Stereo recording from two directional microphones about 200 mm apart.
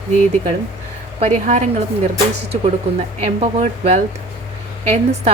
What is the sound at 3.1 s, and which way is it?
A woman's voice, 35° right (ahead or behind).